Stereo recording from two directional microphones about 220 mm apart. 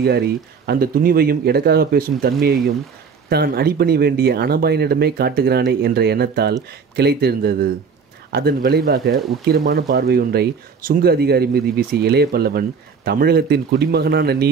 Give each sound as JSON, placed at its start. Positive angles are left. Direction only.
{"t": 0.0, "sound": "speech", "side_deg": -45}